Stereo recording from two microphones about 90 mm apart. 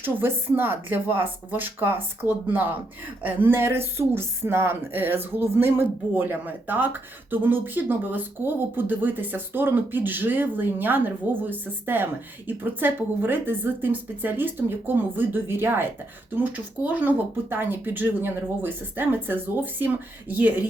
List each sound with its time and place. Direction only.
0.0 s speech: 25° right (ahead or behind)